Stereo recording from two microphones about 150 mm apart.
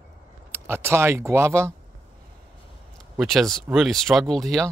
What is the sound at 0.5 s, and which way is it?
Speech, 15° right (ahead or behind).